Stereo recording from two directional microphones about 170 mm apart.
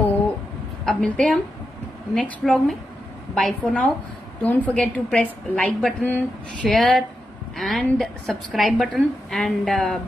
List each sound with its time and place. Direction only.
0.8 s a woman's voice: 5° left (ahead or behind)